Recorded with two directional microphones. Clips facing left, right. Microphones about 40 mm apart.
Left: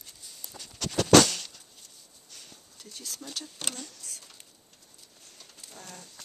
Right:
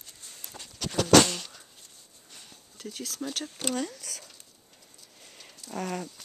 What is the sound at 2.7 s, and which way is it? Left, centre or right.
Speech, right.